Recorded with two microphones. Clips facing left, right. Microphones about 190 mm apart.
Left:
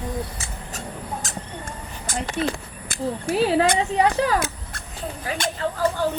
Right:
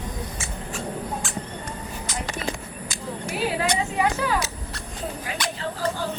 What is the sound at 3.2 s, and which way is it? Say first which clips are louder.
A woman's voice: left 6 dB; 35° left (ahead or behind).